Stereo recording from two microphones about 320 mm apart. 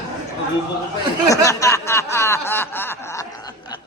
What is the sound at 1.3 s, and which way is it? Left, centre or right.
Snicker, centre.